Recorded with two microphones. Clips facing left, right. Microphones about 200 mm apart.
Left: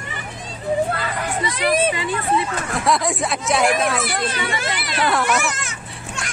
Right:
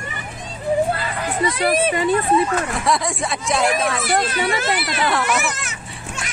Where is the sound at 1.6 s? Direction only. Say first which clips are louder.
Even; 40° right (ahead or behind).